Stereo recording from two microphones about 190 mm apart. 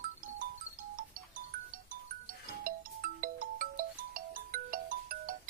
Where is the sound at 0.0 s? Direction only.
45° right (ahead or behind).